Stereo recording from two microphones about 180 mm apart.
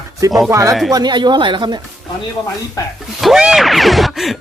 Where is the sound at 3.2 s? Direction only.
Centre (ahead or behind).